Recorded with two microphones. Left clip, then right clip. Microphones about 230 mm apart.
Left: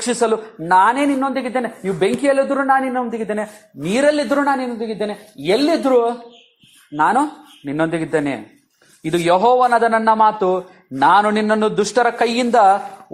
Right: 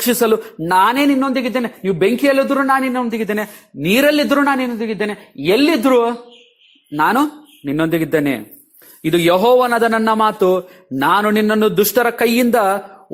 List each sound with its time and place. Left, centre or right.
0.0 s speech: right